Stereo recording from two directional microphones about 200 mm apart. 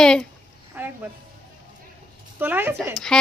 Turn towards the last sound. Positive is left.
turn(degrees=5)  # may be behind; listen again after turning